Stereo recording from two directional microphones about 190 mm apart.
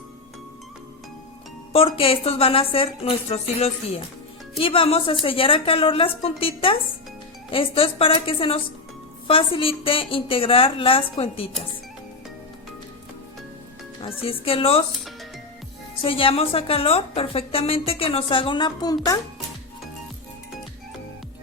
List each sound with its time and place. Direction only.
1.7 s a woman's voice: 30° left (ahead or behind)
14.0 s a woman's voice: 30° left (ahead or behind)
16.0 s a woman's voice: 30° left (ahead or behind)